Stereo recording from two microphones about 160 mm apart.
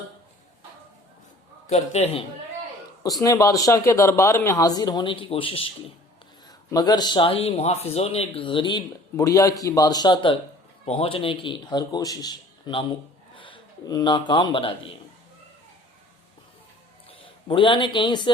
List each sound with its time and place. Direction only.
1.7 s a man's voice: 40° left (ahead or behind)
3.0 s speech: 20° left (ahead or behind)
6.7 s a man's voice: 25° left (ahead or behind)
17.2 s speech: 30° left (ahead or behind)